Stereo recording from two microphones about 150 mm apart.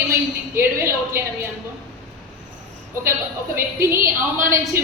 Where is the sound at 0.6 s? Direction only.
15° right (ahead or behind).